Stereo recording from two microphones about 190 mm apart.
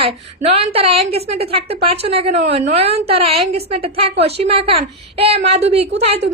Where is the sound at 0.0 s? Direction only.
30° right (ahead or behind).